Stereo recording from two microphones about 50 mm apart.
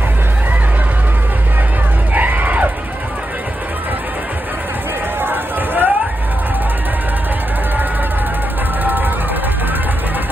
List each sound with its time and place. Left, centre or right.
2.1 s music: right
5.2 s a sound: right
8.8 s music: right